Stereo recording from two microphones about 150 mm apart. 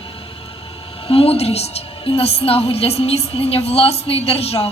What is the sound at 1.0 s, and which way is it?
A woman's voice, 40° left (ahead or behind).